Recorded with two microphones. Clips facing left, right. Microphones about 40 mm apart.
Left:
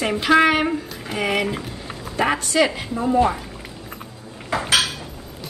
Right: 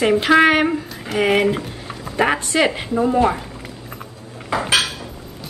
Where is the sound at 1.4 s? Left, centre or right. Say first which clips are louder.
Right 6 dB; centre.